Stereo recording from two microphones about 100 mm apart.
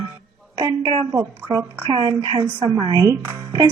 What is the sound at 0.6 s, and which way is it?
A woman's voice, 50° right (ahead or behind).